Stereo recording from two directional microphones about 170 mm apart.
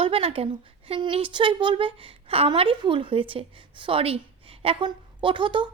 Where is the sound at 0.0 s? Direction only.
35° right (ahead or behind).